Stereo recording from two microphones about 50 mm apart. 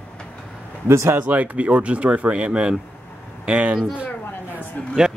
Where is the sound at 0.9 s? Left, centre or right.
Right.